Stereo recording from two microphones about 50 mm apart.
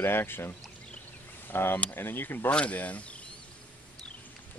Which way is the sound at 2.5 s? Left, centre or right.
Left.